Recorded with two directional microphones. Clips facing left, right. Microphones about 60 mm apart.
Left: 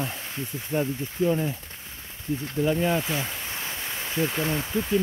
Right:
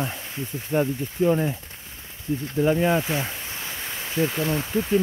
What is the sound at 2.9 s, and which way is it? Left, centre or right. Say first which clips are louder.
Speech: right 3 dB; centre.